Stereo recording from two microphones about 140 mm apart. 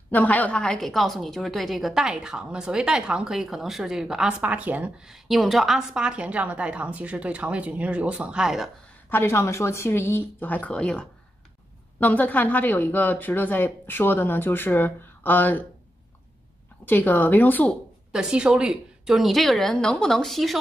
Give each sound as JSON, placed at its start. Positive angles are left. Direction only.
{"t": 0.1, "sound": "a woman's voice", "side_deg": 10}
{"t": 9.1, "sound": "speech", "side_deg": 15}
{"t": 16.8, "sound": "speech", "side_deg": 15}
{"t": 18.1, "sound": "a woman's voice", "side_deg": -5}